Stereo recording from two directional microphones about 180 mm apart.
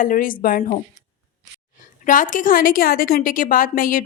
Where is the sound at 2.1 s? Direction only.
45° left (ahead or behind).